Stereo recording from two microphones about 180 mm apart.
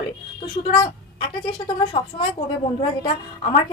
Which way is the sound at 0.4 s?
30° left (ahead or behind).